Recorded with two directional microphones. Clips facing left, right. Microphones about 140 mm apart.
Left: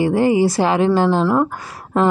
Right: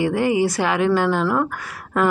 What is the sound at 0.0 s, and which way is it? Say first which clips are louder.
A woman's voice: left 4 dB; 30° left (ahead or behind).